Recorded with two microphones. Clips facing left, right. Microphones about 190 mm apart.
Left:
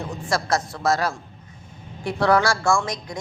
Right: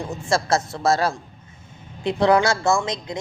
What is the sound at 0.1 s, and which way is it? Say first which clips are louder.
A woman's voice: right 3 dB; 25° right (ahead or behind).